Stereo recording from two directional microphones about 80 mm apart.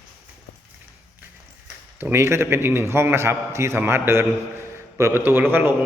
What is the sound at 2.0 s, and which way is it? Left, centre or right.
A man's voice, right.